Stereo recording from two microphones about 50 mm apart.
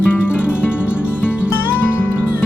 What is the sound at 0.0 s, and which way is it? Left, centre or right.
Music, left.